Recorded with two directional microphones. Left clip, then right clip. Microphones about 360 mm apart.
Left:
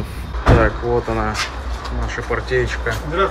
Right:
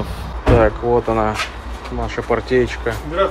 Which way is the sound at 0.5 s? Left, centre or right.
Centre.